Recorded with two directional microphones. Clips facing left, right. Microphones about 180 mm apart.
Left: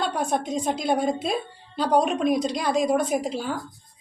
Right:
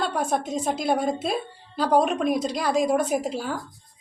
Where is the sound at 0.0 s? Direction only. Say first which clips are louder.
Even; 5° right (ahead or behind).